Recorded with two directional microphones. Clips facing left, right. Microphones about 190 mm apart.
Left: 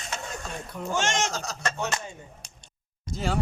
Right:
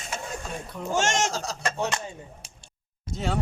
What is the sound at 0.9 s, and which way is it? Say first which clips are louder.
Speech: right 2 dB; 45° right (ahead or behind).